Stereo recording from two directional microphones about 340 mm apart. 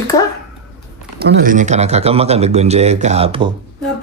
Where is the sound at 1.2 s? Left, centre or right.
Right.